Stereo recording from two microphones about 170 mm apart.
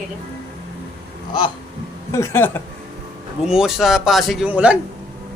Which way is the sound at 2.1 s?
15° left (ahead or behind).